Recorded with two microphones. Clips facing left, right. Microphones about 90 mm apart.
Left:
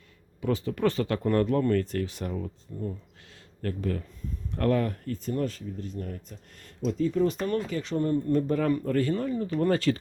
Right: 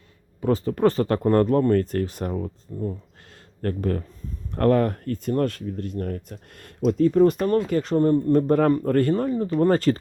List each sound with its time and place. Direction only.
0.4 s speech: 40° right (ahead or behind)
2.7 s speech: 30° right (ahead or behind)
3.6 s speech: 45° right (ahead or behind)